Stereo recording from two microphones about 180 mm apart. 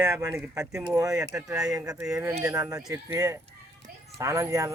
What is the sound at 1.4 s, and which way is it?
Speech, 5° right (ahead or behind).